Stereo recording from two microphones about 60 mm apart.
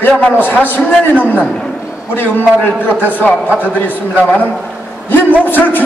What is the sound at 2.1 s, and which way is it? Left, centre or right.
A man's voice, left.